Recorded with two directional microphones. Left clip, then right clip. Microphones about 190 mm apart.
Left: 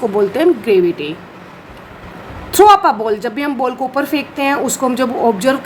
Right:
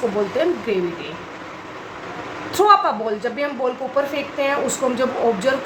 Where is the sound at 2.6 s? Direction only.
45° left (ahead or behind).